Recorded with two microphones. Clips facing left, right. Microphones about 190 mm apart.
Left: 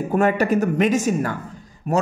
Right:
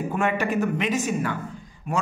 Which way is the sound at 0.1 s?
40° left (ahead or behind).